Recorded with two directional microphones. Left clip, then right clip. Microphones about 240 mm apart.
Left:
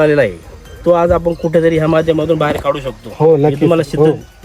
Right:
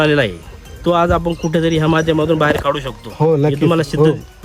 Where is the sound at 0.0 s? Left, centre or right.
Centre.